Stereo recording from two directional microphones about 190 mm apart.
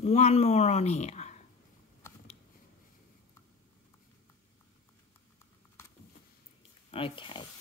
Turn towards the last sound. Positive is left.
turn(degrees=25)  # may be behind; listen again after turning